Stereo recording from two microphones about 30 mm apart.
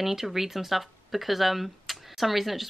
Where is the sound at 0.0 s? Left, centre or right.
Centre.